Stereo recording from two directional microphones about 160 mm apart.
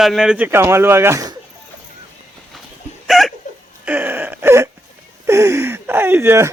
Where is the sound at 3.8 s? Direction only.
10° right (ahead or behind).